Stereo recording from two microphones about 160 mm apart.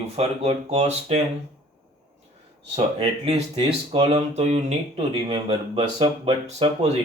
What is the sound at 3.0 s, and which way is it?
Speech, 35° right (ahead or behind).